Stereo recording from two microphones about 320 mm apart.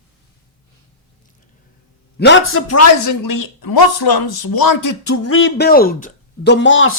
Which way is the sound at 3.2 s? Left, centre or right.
Left.